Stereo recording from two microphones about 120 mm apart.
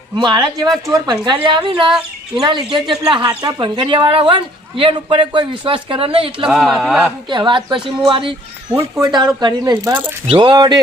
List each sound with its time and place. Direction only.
0.2 s speech: 40° right (ahead or behind)
1.9 s speech: 5° right (ahead or behind)
2.7 s speech: 40° right (ahead or behind)
6.5 s speech: centre (ahead or behind)
7.3 s speech: 40° right (ahead or behind)
8.7 s speech: 25° right (ahead or behind)
9.0 s speech: 35° right (ahead or behind)